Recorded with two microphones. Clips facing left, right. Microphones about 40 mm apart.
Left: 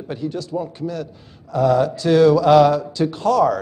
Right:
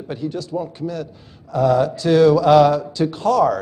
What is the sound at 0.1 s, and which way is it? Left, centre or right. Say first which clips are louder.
Speech: even; centre.